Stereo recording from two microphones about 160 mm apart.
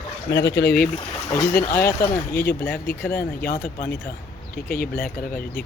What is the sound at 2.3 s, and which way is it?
Speech, 75° left (ahead or behind).